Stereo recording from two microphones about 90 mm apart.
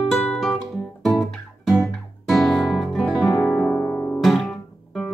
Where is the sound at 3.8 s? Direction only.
20° left (ahead or behind).